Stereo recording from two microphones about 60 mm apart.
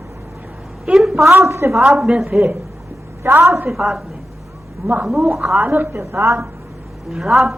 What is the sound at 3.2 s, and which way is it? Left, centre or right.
Speech, right.